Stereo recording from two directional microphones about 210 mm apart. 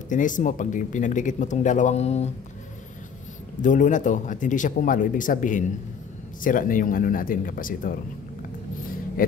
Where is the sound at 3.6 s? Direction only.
35° left (ahead or behind).